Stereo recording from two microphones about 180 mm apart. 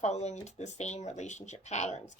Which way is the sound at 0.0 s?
40° left (ahead or behind).